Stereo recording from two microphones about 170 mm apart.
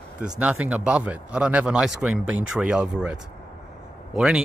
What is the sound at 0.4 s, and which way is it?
Speech, 5° right (ahead or behind).